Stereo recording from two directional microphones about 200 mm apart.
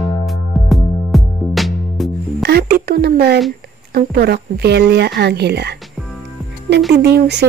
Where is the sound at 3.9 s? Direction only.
55° right (ahead or behind).